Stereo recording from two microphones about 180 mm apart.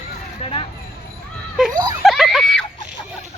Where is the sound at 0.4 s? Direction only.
35° left (ahead or behind).